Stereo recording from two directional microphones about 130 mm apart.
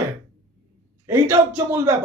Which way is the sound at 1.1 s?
20° right (ahead or behind).